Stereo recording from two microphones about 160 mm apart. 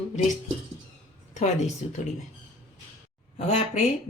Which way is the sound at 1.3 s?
45° left (ahead or behind).